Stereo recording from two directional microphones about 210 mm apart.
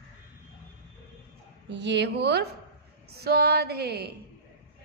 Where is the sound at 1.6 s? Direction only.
55° right (ahead or behind).